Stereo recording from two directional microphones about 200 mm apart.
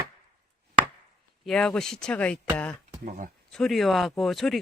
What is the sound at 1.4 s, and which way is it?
Speech, 5° left (ahead or behind).